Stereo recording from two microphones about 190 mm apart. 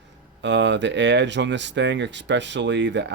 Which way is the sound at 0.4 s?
70° right (ahead or behind).